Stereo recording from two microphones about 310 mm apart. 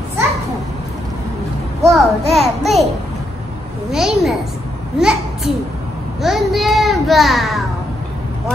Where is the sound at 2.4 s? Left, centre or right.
Centre.